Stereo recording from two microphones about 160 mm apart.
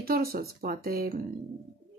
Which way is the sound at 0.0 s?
70° right (ahead or behind).